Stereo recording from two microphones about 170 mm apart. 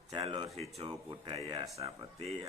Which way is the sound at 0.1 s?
35° right (ahead or behind).